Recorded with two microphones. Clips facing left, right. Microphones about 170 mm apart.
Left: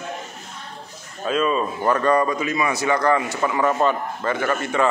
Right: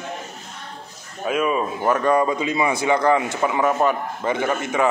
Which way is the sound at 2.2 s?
20° right (ahead or behind).